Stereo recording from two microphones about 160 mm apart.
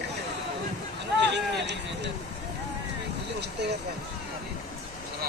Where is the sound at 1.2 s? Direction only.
90° right.